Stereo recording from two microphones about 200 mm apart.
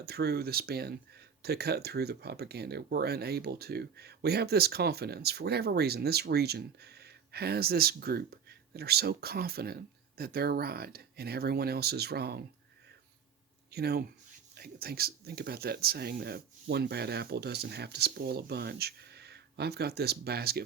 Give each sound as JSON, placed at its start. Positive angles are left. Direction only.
{"t": 0.0, "sound": "speech", "side_deg": -55}
{"t": 13.7, "sound": "speech", "side_deg": -50}